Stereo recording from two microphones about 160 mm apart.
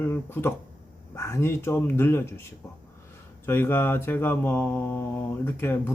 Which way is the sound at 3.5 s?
15° left (ahead or behind).